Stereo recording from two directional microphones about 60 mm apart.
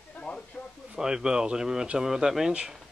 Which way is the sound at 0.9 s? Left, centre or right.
Centre.